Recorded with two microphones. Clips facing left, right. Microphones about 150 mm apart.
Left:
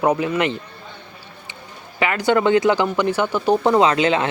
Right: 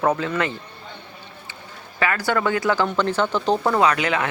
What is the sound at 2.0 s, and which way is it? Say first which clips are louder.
Speech: left 4 dB; 20° left (ahead or behind).